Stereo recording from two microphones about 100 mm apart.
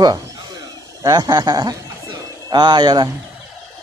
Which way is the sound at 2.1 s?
45° right (ahead or behind).